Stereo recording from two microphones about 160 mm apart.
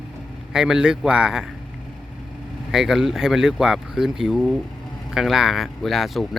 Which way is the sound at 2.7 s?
5° right (ahead or behind).